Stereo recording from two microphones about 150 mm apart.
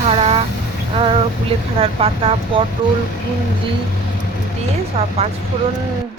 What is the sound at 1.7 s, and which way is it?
Speech, 40° right (ahead or behind).